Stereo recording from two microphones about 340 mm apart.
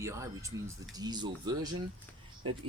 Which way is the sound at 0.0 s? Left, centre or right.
Centre.